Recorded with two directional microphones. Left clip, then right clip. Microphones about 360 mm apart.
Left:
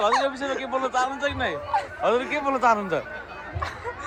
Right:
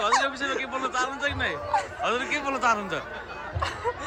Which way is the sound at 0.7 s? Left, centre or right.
Centre.